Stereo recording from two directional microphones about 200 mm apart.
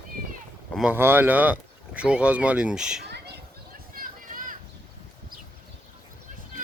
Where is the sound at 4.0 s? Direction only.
45° right (ahead or behind).